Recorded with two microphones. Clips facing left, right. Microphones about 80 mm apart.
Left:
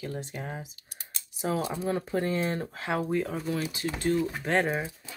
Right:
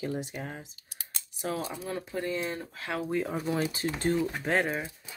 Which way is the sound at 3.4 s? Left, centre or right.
Right.